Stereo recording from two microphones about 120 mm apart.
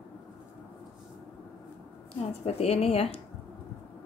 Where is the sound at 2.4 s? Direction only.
60° left (ahead or behind).